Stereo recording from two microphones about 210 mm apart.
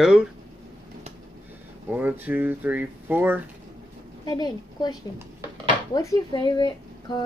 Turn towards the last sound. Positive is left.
turn(degrees=20)  # may be behind; listen again after turning